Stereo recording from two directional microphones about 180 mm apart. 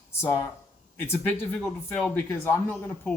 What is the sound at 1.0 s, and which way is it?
Speech, 10° left (ahead or behind).